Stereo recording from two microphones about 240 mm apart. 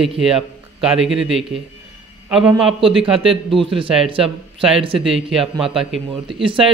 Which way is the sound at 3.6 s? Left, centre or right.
Right.